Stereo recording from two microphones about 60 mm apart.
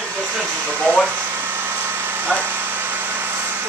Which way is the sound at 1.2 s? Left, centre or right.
Right.